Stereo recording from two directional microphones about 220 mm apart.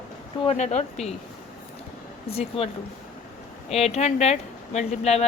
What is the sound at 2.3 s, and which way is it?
Speech, 25° left (ahead or behind).